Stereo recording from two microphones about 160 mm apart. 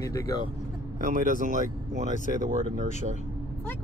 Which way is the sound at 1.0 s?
55° right (ahead or behind).